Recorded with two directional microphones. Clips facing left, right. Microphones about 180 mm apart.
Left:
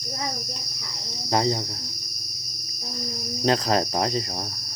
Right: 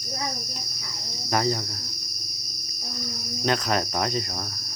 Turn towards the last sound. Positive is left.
turn(degrees=30)  # may be behind; listen again after turning